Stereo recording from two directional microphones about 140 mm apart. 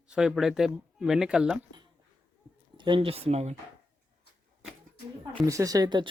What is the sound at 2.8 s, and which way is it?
Speech, 35° right (ahead or behind).